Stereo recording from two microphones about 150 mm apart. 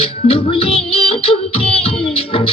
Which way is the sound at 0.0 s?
40° left (ahead or behind).